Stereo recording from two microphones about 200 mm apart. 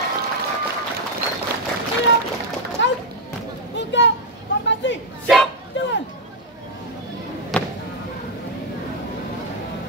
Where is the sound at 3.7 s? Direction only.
65° left (ahead or behind).